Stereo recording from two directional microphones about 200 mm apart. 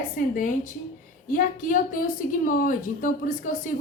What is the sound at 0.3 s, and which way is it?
A woman's voice, 40° left (ahead or behind).